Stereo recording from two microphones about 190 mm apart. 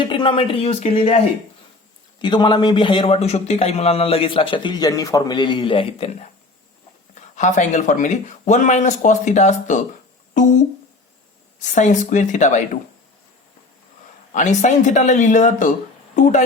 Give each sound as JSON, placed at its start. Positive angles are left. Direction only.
{"t": 0.0, "sound": "a man's voice", "side_deg": 25}
{"t": 2.2, "sound": "a man's voice", "side_deg": 25}
{"t": 7.3, "sound": "speech", "side_deg": 40}
{"t": 11.6, "sound": "speech", "side_deg": 40}
{"t": 14.3, "sound": "speech", "side_deg": 40}